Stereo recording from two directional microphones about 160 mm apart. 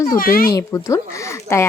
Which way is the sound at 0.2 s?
65° left (ahead or behind).